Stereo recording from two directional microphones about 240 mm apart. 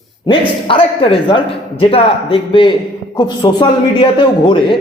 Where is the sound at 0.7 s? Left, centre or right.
Left.